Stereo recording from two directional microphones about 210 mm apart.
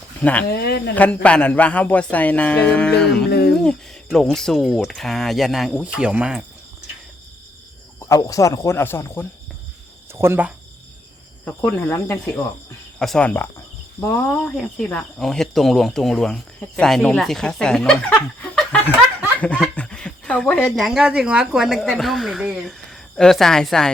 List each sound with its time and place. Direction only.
0.2 s speech: 5° left (ahead or behind)
0.4 s speech: 50° left (ahead or behind)
0.9 s speech: 5° left (ahead or behind)
3.2 s a sound: 50° left (ahead or behind)
3.6 s speech: 5° left (ahead or behind)
8.0 s speech: 15° left (ahead or behind)
10.2 s speech: 10° right (ahead or behind)
11.4 s speech: 10° left (ahead or behind)